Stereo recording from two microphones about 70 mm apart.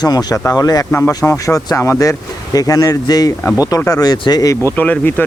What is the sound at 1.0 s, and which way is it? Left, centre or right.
Speech, left.